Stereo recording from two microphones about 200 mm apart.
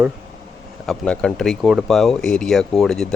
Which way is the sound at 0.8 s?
5° left (ahead or behind).